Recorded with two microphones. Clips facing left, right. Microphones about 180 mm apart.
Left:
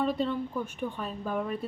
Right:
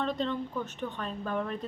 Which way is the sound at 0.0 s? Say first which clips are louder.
Left 3 dB; 10° left (ahead or behind).